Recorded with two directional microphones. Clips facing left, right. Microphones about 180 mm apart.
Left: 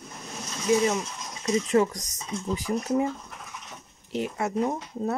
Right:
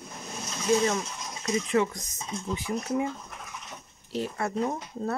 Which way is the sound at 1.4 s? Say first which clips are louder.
Left 3 dB; 35° left (ahead or behind).